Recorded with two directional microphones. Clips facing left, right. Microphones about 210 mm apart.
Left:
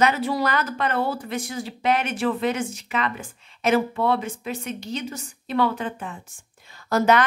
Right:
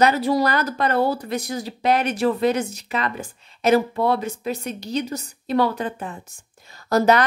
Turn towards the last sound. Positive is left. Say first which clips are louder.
# right 2 dB
turn(degrees=-35)  # may be behind; listen again after turning